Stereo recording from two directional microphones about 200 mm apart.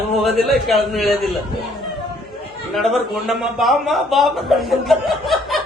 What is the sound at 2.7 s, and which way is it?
A man's voice, centre (ahead or behind).